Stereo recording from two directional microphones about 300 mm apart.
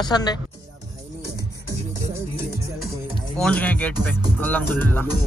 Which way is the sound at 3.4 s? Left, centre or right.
Centre.